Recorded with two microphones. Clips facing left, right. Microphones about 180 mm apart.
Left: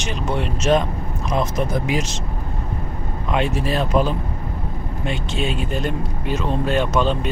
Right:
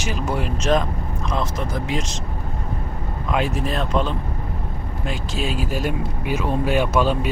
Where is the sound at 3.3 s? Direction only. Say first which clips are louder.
Left 2 dB; centre (ahead or behind).